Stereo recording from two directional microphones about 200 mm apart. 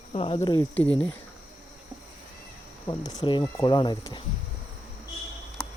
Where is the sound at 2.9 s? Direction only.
20° left (ahead or behind).